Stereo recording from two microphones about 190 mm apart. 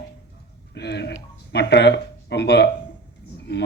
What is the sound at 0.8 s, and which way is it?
Speech, 65° left (ahead or behind).